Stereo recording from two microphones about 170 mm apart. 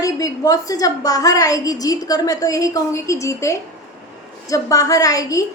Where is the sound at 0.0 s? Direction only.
20° left (ahead or behind).